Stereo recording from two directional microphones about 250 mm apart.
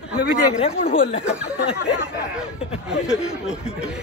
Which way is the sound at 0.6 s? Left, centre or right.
Left.